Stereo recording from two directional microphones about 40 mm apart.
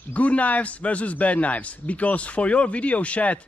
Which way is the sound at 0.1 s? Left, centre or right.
Left.